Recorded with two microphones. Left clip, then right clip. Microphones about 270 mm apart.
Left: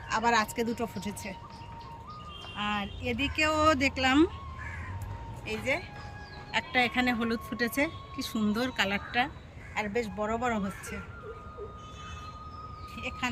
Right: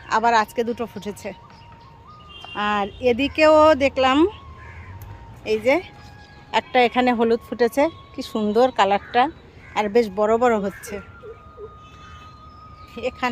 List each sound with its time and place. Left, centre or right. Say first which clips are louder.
0.1 s speech: right 9 dB; centre
2.6 s speech: right 11 dB; centre
5.5 s speech: right 12 dB; centre
13.0 s speech: right 11 dB; centre